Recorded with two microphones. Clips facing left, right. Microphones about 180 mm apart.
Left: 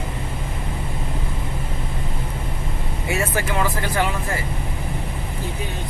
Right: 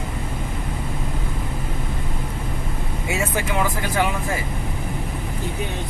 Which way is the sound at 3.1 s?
15° right (ahead or behind).